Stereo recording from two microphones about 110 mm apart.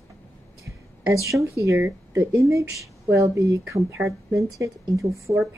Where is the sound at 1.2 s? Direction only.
30° right (ahead or behind).